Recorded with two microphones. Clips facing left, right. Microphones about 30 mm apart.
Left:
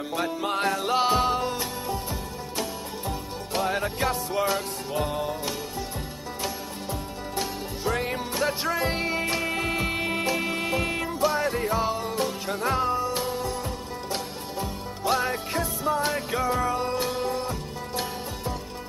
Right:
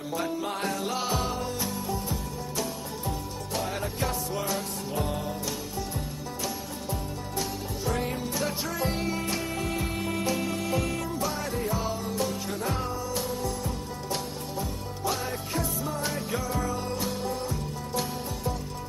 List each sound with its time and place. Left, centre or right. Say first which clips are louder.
0.4 s music: left 4 dB; left
7.3 s music: left 2 dB; left
11.8 s music: left 3 dB; left